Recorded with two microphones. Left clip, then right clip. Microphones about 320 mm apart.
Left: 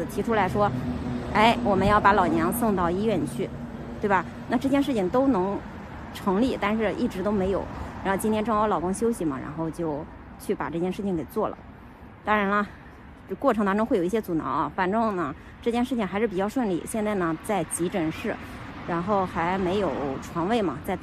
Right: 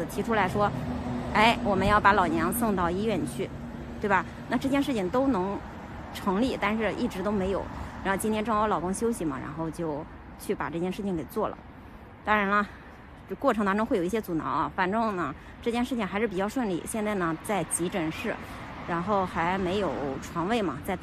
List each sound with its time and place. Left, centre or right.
0.1 s speech: centre